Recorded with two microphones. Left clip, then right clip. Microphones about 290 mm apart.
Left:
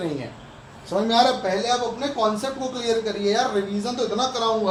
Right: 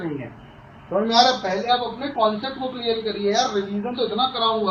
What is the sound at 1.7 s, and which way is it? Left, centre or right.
A man's voice, centre.